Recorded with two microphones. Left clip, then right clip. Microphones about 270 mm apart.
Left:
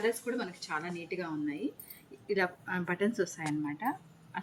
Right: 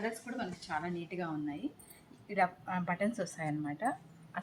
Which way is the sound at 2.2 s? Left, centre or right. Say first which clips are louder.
Even; right.